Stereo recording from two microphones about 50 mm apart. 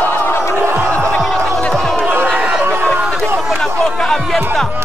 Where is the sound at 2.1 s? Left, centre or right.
Right.